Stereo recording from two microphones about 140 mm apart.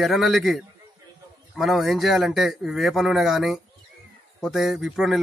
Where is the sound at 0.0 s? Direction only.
Centre (ahead or behind).